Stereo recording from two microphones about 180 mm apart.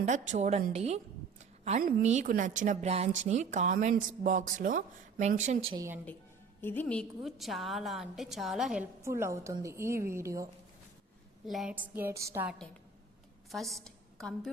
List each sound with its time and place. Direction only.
0.0 s a woman's voice: 40° right (ahead or behind)
5.7 s a woman's voice: 15° right (ahead or behind)
6.6 s a woman's voice: 10° left (ahead or behind)
9.0 s a woman's voice: 15° right (ahead or behind)
11.4 s a woman's voice: centre (ahead or behind)
13.5 s a woman's voice: centre (ahead or behind)